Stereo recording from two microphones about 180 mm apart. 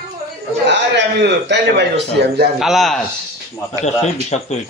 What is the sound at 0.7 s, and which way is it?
A man's voice, 75° right (ahead or behind).